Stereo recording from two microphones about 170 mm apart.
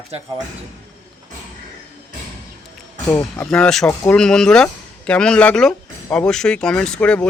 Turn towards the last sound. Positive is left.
turn(degrees=5)  # may be behind; listen again after turning